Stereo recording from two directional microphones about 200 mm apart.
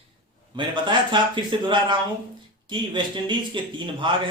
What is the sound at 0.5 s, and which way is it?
Speech, 25° right (ahead or behind).